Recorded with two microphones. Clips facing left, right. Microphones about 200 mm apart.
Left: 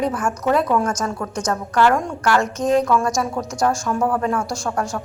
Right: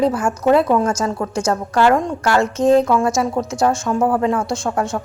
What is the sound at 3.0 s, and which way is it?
Speech, 5° right (ahead or behind).